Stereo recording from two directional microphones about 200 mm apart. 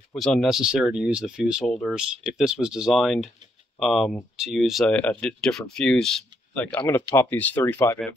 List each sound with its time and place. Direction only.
0.1 s speech: centre (ahead or behind)
6.8 s speech: 20° left (ahead or behind)
7.2 s speech: 10° left (ahead or behind)